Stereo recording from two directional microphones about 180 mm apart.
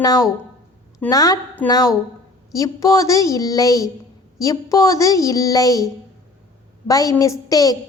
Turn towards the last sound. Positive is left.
turn(degrees=20)  # may be behind; listen again after turning